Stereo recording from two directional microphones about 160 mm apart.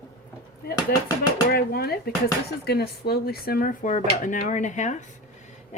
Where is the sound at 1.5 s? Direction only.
75° left (ahead or behind).